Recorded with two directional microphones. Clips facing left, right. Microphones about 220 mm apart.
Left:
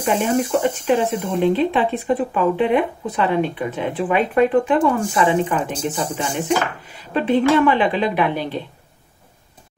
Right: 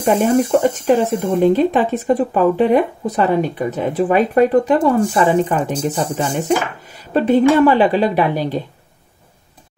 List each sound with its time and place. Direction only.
0.0 s speech: 40° right (ahead or behind)